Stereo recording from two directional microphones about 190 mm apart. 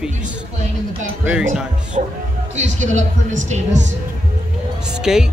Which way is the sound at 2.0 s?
45° right (ahead or behind).